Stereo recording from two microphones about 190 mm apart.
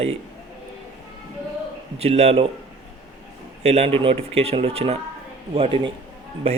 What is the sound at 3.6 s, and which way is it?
A man's voice, 35° right (ahead or behind).